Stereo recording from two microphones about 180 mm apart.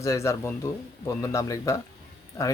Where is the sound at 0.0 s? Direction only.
15° left (ahead or behind).